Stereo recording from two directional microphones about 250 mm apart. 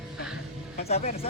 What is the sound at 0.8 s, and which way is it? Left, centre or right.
Speech, left.